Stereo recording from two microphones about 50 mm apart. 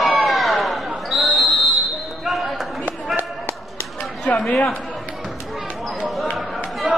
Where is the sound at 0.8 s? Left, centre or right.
Centre.